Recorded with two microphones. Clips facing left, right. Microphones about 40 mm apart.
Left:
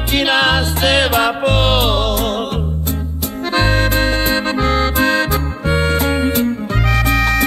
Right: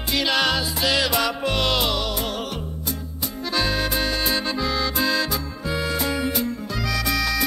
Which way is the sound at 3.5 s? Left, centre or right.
Left.